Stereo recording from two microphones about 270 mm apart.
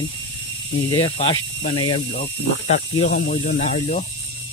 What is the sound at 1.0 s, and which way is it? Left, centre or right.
Speech, left.